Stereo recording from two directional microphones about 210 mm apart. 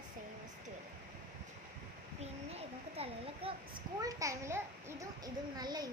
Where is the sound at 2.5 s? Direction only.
30° right (ahead or behind).